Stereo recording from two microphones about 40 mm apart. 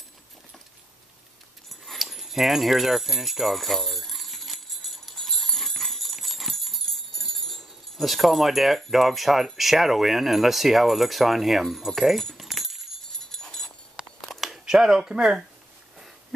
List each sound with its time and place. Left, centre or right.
1.7 s dog: centre
8.9 s speech: centre
12.4 s keys jangling: centre
13.2 s a sound: centre
14.0 s a sound: right
14.7 s speech: centre